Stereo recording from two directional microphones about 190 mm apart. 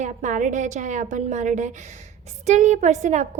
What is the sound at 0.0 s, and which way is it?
A woman's voice, 40° right (ahead or behind).